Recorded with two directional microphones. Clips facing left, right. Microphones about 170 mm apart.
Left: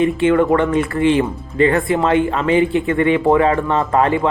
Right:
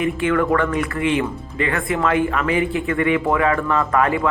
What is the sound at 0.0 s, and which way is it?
Speech, 25° left (ahead or behind).